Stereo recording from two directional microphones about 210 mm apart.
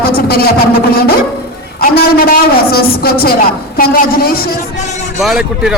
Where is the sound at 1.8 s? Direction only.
45° left (ahead or behind).